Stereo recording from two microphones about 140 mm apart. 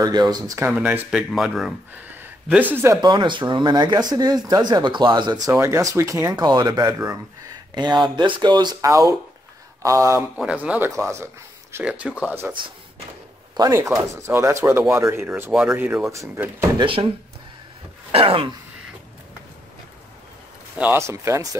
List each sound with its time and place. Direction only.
0.0 s speech: 30° right (ahead or behind)
0.7 s speech: 10° right (ahead or behind)
2.0 s speech: 10° right (ahead or behind)
3.0 s speech: 35° right (ahead or behind)
5.5 s speech: 20° right (ahead or behind)
10.3 s speech: 10° right (ahead or behind)
10.9 s speech: 20° right (ahead or behind)
11.7 s speech: 10° right (ahead or behind)
13.6 s speech: 25° right (ahead or behind)
16.0 s speech: 20° right (ahead or behind)
16.7 s speech: 40° right (ahead or behind)
18.1 s speech: 40° right (ahead or behind)
20.7 s speech: 10° right (ahead or behind)